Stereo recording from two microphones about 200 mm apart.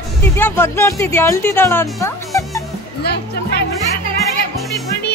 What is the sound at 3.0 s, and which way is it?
Music, 55° left (ahead or behind).